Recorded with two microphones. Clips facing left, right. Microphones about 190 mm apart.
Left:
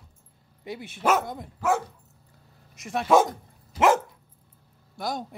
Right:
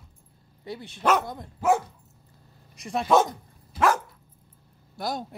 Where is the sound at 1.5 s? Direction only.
15° right (ahead or behind).